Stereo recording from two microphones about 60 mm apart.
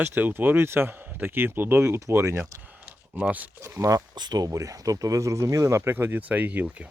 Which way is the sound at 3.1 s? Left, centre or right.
Right.